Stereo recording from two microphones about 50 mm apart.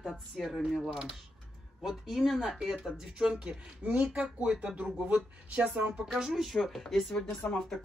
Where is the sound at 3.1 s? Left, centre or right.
Centre.